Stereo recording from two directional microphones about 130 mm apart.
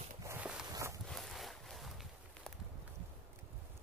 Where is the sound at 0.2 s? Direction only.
20° right (ahead or behind).